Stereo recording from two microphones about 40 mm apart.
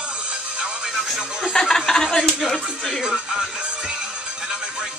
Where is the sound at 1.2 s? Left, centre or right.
Centre.